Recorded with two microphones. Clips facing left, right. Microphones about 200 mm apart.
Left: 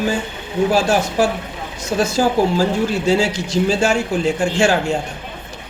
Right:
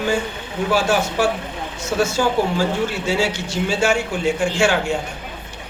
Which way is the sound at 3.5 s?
40° left (ahead or behind).